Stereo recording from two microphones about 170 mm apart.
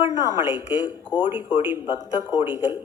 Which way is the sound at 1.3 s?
15° right (ahead or behind).